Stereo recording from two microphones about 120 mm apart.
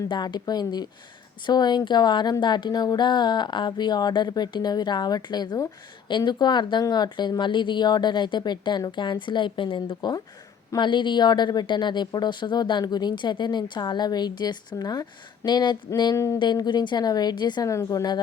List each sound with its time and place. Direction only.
0.1 s speech: 40° left (ahead or behind)
16.1 s speech: 25° left (ahead or behind)
16.4 s speech: 40° left (ahead or behind)